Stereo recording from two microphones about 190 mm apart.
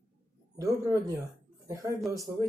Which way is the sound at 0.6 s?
15° right (ahead or behind).